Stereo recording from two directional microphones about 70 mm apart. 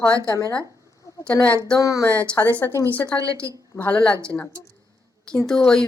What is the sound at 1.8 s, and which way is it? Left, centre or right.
Speech, left.